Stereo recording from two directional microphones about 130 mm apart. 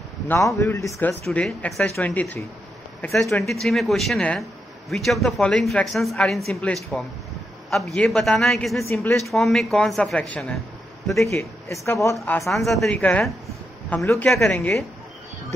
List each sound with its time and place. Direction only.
0.3 s speech: 25° left (ahead or behind)
1.2 s speech: 10° left (ahead or behind)
8.8 s speech: 15° left (ahead or behind)
9.2 s speech: centre (ahead or behind)
11.2 s speech: 20° left (ahead or behind)
12.4 s a man's voice: centre (ahead or behind)